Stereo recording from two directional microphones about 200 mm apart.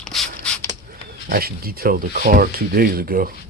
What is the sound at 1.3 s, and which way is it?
Speech, 50° right (ahead or behind).